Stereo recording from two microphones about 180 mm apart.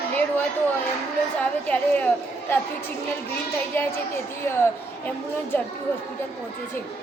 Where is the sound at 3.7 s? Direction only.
10° left (ahead or behind).